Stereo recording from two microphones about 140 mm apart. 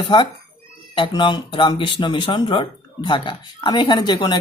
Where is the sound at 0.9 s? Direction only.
35° left (ahead or behind).